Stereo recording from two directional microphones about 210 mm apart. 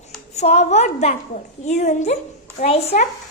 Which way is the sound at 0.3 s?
30° left (ahead or behind).